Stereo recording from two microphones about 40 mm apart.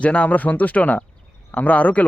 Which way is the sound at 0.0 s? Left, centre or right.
Left.